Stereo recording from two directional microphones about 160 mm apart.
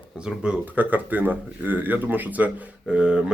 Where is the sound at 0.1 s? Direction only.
5° right (ahead or behind).